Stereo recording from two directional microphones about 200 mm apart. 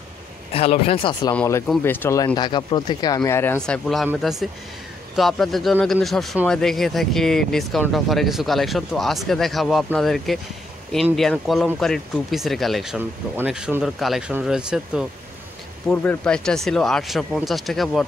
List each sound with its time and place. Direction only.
0.5 s speech: 30° left (ahead or behind)
1.3 s speech: 5° left (ahead or behind)
2.2 s speech: 20° left (ahead or behind); by 15.0 s 5° right (ahead or behind)
15.9 s speech: 10° left (ahead or behind)